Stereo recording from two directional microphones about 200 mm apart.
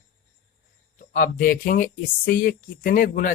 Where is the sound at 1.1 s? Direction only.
45° left (ahead or behind).